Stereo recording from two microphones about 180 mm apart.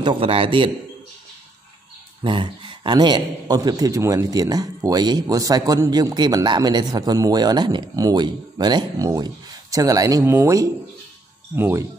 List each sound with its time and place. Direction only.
0.0 s a man's voice: 30° right (ahead or behind)
2.2 s a man's voice: 25° right (ahead or behind)